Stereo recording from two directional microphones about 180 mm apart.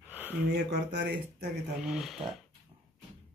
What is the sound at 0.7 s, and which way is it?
Speech, 70° right (ahead or behind).